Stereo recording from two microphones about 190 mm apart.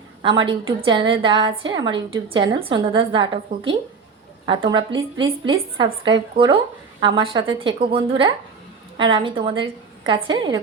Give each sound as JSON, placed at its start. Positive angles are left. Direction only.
{"t": 0.2, "sound": "a woman's voice", "side_deg": -25}